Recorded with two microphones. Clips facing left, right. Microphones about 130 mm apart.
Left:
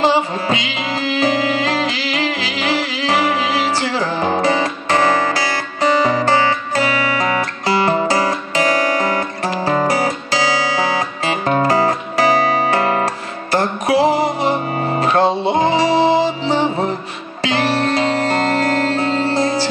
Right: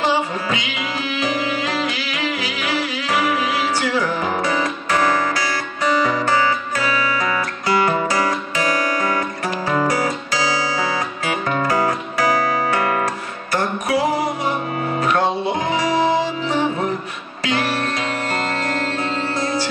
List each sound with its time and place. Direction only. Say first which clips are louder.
3.0 s music: left 2 dB; 30° left (ahead or behind)
9.7 s guitar: left 2 dB; 30° left (ahead or behind)
11.2 s music: left 5 dB; 35° left (ahead or behind)